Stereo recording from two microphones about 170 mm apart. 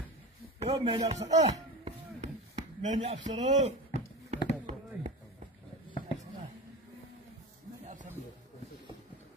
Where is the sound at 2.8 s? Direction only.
45° right (ahead or behind).